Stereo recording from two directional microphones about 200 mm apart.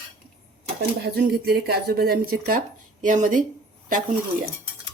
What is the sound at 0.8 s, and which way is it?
Speech, 50° right (ahead or behind).